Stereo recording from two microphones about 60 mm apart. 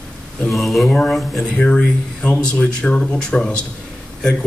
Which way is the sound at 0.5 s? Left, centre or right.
Centre.